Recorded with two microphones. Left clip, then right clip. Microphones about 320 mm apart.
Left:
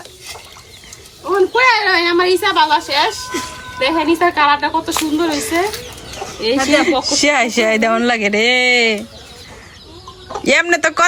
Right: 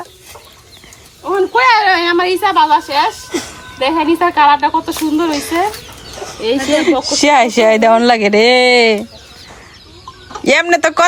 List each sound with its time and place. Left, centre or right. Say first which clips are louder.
1.2 s a woman's voice: right 1 dB; right
10.4 s speech: right 2 dB; centre